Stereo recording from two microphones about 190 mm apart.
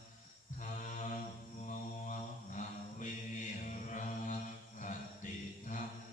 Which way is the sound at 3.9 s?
40° left (ahead or behind).